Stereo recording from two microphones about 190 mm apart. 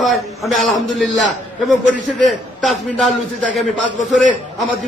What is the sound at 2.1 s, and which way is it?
A man's voice, centre (ahead or behind).